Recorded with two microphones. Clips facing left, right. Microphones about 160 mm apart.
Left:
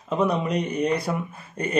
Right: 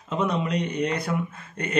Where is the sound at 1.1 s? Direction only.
20° left (ahead or behind).